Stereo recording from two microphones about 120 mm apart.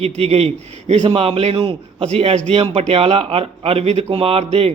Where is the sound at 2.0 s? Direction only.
65° right (ahead or behind).